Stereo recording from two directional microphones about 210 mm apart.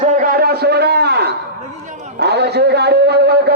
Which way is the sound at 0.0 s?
35° right (ahead or behind).